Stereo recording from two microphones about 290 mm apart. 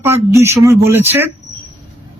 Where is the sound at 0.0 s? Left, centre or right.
Centre.